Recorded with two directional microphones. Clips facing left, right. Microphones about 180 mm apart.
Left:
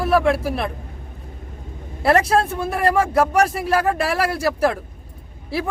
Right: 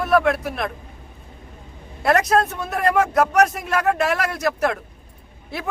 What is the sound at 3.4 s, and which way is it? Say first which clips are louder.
Speech: left 1 dB; 30° left (ahead or behind).